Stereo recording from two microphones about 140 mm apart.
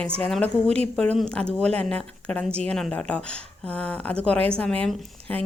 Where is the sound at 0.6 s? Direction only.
50° right (ahead or behind).